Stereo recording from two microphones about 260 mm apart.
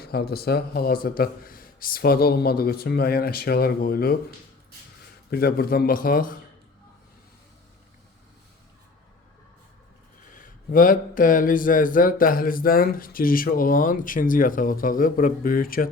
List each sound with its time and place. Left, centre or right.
0.0 s speech: left
5.3 s speech: left
10.3 s speech: left